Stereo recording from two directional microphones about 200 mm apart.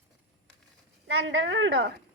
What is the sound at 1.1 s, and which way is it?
Speech, 85° right.